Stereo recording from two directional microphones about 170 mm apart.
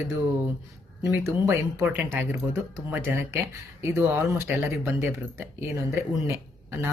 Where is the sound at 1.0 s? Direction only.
15° right (ahead or behind).